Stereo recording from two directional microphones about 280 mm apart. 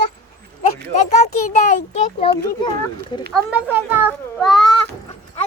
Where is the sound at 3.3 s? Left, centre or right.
Centre.